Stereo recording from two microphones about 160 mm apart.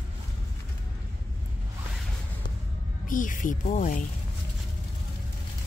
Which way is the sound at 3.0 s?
55° left (ahead or behind).